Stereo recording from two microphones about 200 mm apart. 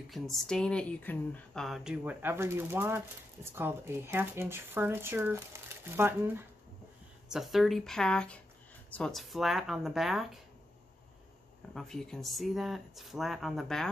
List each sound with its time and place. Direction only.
0.1 s speech: centre (ahead or behind)
11.7 s speech: centre (ahead or behind)